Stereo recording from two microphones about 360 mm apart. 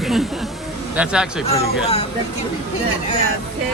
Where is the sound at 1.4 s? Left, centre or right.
Centre.